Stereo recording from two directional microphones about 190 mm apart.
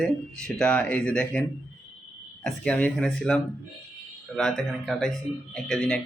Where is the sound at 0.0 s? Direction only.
5° left (ahead or behind).